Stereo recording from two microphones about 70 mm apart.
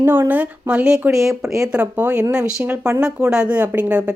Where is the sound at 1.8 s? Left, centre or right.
Right.